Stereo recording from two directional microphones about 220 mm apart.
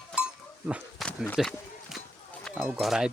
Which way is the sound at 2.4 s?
Centre (ahead or behind).